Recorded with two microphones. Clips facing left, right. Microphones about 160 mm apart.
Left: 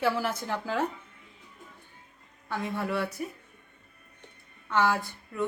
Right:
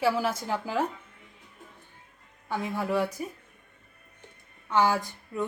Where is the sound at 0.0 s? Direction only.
10° right (ahead or behind).